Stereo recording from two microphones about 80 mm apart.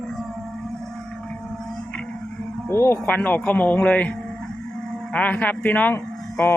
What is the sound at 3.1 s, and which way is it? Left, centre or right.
Speech, centre.